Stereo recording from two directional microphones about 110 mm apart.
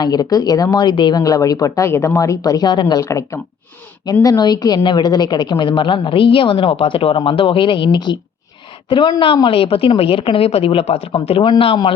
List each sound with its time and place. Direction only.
0.0 s speech: 35° left (ahead or behind)
3.0 s a woman's voice: 25° left (ahead or behind); by 11.6 s 50° left (ahead or behind)